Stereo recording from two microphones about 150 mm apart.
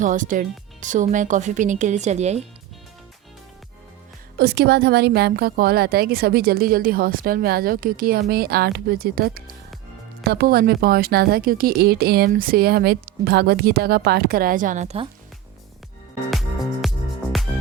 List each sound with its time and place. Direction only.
0.0 s speech: 60° right (ahead or behind)
4.4 s speech: 90° right; by 8.2 s 75° right (ahead or behind)
8.3 s speech: 90° right; by 14.9 s 55° right (ahead or behind)
16.3 s music: centre (ahead or behind)